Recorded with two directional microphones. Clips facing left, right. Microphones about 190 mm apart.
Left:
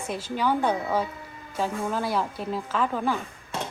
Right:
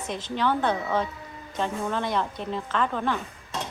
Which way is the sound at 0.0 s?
10° left (ahead or behind).